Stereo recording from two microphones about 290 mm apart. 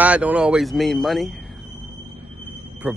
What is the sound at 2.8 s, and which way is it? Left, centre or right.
Speech, centre.